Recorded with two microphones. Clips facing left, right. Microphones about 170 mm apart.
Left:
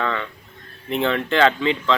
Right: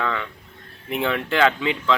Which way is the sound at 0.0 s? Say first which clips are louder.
Left 1 dB; 5° right (ahead or behind).